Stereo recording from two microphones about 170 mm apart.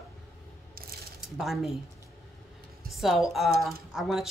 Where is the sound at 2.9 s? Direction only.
Centre (ahead or behind).